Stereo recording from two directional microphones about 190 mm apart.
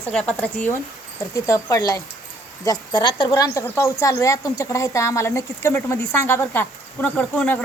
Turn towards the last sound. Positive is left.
turn(degrees=10)  # may be behind; listen again after turning